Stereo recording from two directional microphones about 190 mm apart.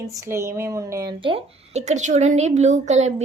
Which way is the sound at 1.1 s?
25° right (ahead or behind).